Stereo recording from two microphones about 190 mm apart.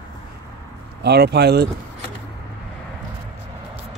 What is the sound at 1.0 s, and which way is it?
Speech, 60° right (ahead or behind).